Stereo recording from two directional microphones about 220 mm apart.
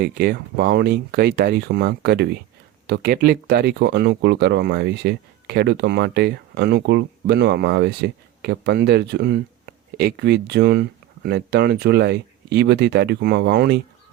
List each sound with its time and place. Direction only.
0.0 s speech: 45° right (ahead or behind)